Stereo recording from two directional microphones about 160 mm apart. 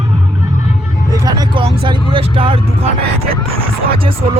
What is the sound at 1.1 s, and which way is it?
Vehicle, 25° right (ahead or behind).